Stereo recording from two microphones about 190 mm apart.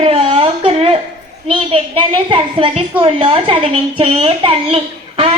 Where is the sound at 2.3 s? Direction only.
30° right (ahead or behind).